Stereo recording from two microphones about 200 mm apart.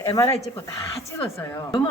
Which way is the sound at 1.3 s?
20° left (ahead or behind).